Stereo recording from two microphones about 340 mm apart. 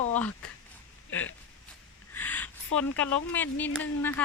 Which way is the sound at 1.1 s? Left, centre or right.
Left.